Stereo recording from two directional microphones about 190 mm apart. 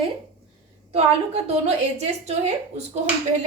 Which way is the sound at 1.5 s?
35° right (ahead or behind).